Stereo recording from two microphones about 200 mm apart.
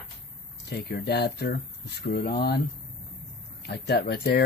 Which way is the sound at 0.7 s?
50° left (ahead or behind).